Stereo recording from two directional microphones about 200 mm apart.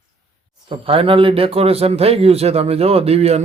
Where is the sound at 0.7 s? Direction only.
25° right (ahead or behind).